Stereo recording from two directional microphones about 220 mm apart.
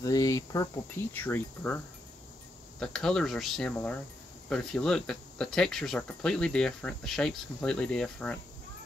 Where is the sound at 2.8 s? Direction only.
5° left (ahead or behind).